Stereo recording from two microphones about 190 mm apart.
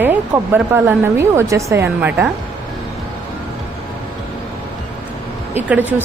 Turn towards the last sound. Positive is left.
turn(degrees=-10)  # may be behind; listen again after turning